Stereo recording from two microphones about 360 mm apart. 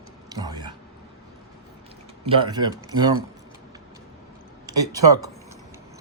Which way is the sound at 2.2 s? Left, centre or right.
Centre.